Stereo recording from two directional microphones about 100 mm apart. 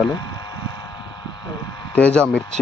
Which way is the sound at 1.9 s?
10° left (ahead or behind).